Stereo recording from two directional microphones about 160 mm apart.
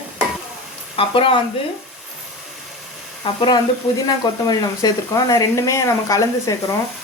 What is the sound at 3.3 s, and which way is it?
Speech, 35° left (ahead or behind).